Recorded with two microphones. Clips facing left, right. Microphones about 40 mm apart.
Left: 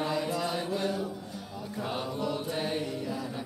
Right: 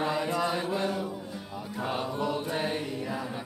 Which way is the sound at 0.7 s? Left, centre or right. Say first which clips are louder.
Right 1 dB; centre.